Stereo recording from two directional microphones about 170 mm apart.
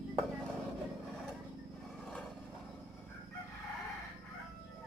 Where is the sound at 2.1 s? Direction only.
5° left (ahead or behind).